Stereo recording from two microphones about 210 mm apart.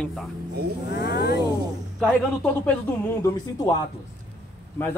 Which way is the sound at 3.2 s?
15° left (ahead or behind).